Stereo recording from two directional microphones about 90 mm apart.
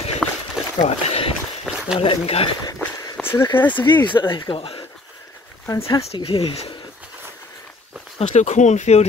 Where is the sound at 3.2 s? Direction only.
30° left (ahead or behind).